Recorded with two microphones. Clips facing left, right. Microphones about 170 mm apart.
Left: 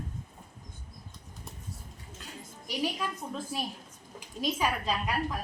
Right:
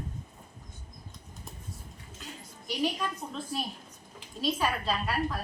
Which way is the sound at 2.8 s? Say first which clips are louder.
Right 2 dB; 10° left (ahead or behind).